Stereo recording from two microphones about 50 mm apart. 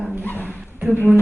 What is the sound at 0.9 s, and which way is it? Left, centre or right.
Speech, right.